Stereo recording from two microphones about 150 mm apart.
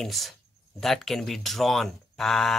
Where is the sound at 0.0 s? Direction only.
Centre (ahead or behind).